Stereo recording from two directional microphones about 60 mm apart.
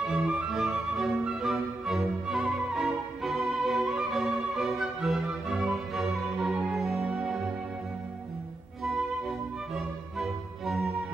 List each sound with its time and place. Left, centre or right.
0.0 s music: centre
0.5 s music: centre
9.8 s music: centre